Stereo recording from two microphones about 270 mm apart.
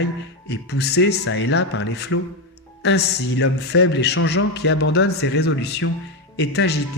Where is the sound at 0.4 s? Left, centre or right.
Left.